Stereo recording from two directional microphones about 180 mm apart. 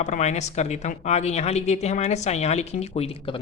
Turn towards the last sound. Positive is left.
turn(degrees=30)  # may be behind; listen again after turning